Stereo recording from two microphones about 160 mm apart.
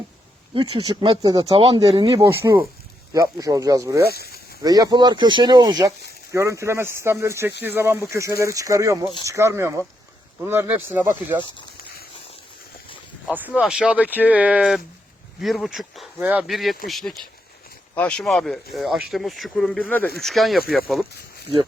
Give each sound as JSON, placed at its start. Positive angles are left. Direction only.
{"t": 0.5, "sound": "speech", "side_deg": -30}
{"t": 2.1, "sound": "speech", "side_deg": -20}
{"t": 4.1, "sound": "speech", "side_deg": 80}
{"t": 4.6, "sound": "speech", "side_deg": -25}
{"t": 13.2, "sound": "speech", "side_deg": -10}